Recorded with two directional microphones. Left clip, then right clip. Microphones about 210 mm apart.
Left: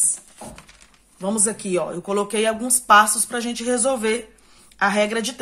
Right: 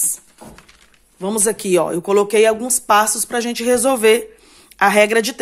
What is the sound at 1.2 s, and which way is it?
Speech, 40° right (ahead or behind).